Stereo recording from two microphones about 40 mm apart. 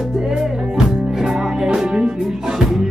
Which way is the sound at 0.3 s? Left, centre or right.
Centre.